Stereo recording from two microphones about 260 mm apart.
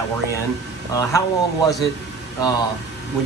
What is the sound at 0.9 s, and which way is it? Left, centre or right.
Speech, centre.